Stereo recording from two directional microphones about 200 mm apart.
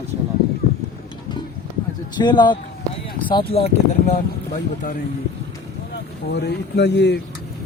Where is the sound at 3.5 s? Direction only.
35° left (ahead or behind).